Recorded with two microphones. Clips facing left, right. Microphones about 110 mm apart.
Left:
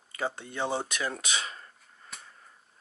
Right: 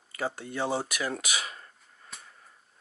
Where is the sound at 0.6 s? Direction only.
5° right (ahead or behind).